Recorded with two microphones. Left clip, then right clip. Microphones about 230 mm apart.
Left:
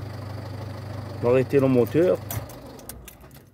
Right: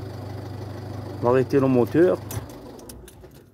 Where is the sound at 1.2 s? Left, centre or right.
Centre.